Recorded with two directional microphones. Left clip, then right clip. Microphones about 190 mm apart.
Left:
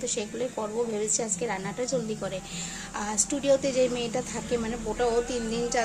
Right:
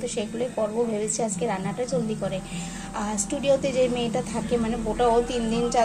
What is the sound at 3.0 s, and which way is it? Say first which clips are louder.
A woman's voice: right 1 dB; 15° left (ahead or behind).